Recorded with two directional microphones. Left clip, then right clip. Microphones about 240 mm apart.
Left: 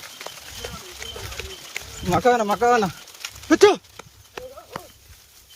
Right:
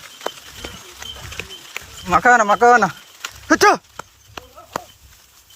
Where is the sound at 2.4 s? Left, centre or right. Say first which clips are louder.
Right 6 dB; right.